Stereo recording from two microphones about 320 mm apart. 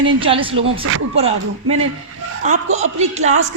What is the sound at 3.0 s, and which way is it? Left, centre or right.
Speech, right.